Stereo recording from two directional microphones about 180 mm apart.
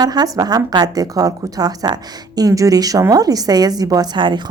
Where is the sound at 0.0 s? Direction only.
20° right (ahead or behind).